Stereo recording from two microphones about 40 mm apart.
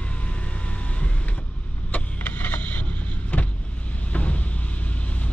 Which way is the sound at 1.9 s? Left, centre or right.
Left.